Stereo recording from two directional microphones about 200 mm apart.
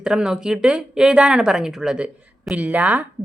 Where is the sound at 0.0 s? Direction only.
5° right (ahead or behind).